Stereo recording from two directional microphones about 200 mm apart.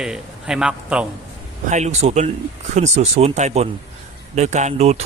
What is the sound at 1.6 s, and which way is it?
Speech, 35° right (ahead or behind).